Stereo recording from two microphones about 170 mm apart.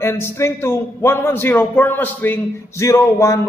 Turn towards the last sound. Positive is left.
turn(degrees=15)  # may be behind; listen again after turning